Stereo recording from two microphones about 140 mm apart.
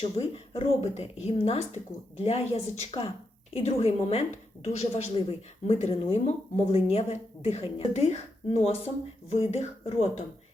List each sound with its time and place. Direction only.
0.2 s speech: 45° left (ahead or behind)